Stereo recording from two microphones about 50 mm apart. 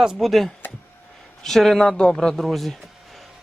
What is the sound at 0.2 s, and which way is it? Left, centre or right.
A man's voice, centre.